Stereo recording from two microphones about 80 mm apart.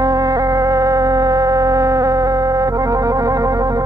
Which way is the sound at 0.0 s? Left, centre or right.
Right.